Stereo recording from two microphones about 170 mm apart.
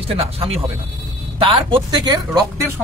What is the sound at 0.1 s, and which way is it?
Speech, 35° right (ahead or behind).